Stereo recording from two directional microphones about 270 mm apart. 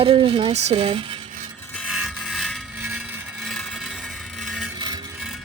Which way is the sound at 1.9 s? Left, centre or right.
Centre.